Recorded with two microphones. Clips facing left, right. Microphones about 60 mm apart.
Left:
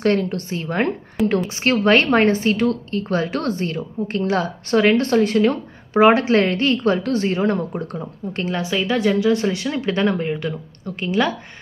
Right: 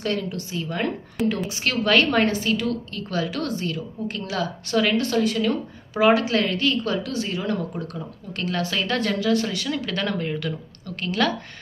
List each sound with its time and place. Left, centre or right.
0.0 s a woman's voice: left
1.2 s a woman's voice: centre
1.6 s a woman's voice: left